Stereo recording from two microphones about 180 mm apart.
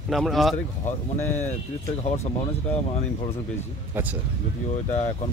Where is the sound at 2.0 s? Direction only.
40° left (ahead or behind).